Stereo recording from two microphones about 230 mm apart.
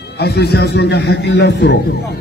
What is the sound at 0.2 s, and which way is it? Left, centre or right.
A man's voice, left.